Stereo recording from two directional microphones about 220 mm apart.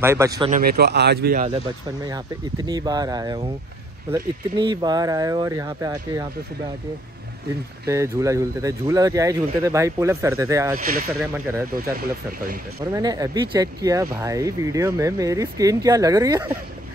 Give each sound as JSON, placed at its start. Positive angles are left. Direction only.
{"t": 0.0, "sound": "speech", "side_deg": -10}
{"t": 0.5, "sound": "speech", "side_deg": -40}
{"t": 2.0, "sound": "speech", "side_deg": -15}
{"t": 7.8, "sound": "speech", "side_deg": -15}
{"t": 10.8, "sound": "speech", "side_deg": -40}
{"t": 12.9, "sound": "speech", "side_deg": -15}